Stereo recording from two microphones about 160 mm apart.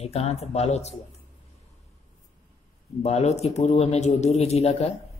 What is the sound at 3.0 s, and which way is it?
A woman's voice, 40° left (ahead or behind).